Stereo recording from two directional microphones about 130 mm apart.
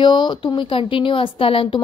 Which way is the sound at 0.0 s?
35° left (ahead or behind).